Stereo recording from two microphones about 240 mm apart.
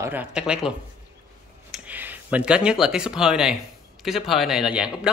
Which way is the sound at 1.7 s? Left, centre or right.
Centre.